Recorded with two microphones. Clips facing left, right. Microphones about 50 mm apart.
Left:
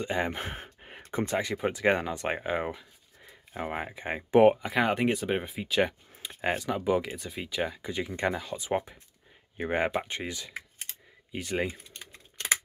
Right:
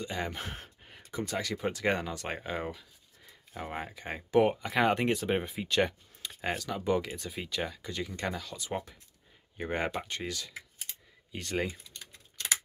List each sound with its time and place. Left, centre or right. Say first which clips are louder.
0.0 s speech: left 5 dB; left
4.6 s speech: left 1 dB; centre
11.7 s typing: left 3 dB; left